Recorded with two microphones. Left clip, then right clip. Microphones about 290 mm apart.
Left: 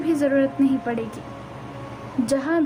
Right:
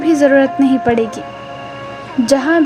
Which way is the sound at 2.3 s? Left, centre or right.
Right.